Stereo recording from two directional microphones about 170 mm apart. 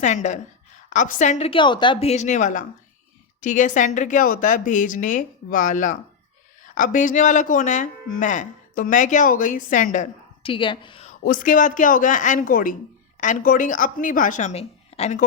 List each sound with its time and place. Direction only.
0.0 s speech: 45° left (ahead or behind)
1.5 s speech: 30° left (ahead or behind); by 10.1 s 45° left (ahead or behind)
10.4 s a woman's voice: 30° left (ahead or behind)
11.0 s speech: 50° left (ahead or behind)